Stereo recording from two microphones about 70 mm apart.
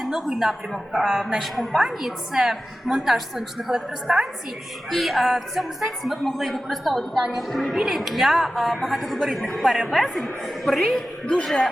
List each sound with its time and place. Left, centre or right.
0.0 s a man's voice: centre